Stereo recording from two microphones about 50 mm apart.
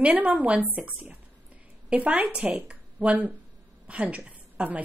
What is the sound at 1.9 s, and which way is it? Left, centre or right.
A woman's voice, right.